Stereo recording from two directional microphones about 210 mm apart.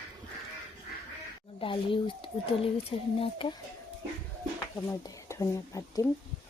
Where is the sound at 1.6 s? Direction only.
25° left (ahead or behind).